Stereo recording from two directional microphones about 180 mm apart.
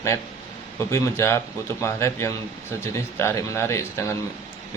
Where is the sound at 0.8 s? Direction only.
15° left (ahead or behind).